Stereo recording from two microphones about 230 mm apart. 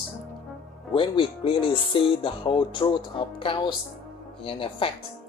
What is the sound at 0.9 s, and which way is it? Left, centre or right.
Speech, left.